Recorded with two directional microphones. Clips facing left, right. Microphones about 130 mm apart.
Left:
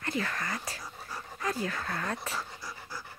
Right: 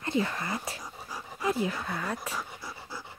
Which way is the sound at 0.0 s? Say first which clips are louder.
Right 4 dB; 20° right (ahead or behind).